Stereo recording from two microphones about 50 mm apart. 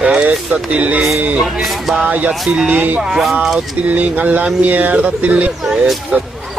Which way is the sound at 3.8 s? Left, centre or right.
Right.